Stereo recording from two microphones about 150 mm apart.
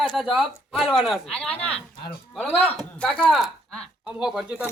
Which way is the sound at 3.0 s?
10° left (ahead or behind).